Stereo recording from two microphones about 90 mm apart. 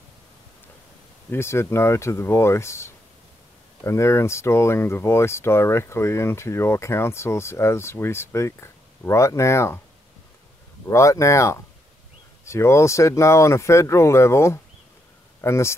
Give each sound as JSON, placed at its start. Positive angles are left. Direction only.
{"t": 1.3, "sound": "speech", "side_deg": 30}
{"t": 10.9, "sound": "speech", "side_deg": 35}